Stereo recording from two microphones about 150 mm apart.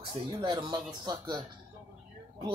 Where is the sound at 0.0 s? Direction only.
35° right (ahead or behind).